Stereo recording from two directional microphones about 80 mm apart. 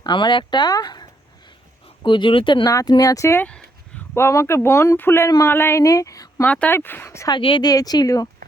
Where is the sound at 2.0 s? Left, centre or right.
Left.